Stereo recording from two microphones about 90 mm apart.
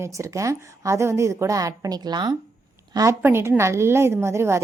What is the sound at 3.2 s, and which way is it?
A woman's voice, 30° right (ahead or behind).